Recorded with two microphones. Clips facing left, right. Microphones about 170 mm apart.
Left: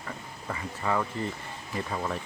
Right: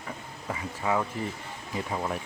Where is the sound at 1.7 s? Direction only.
10° right (ahead or behind).